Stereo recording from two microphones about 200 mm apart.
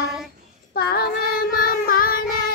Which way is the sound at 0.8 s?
50° left (ahead or behind).